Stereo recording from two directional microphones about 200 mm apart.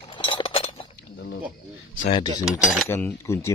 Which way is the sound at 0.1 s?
25° left (ahead or behind).